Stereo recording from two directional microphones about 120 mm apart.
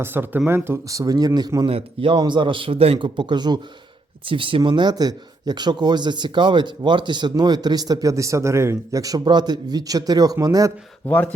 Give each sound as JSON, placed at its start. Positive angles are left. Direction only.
{"t": 0.0, "sound": "a man's voice", "side_deg": -15}
{"t": 1.6, "sound": "a man's voice", "side_deg": -45}
{"t": 3.2, "sound": "speech", "side_deg": -40}
{"t": 11.0, "sound": "speech", "side_deg": 15}